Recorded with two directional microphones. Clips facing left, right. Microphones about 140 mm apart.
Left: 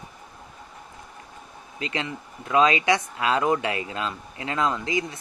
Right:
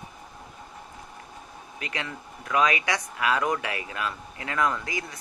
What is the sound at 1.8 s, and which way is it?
Speech, 25° left (ahead or behind).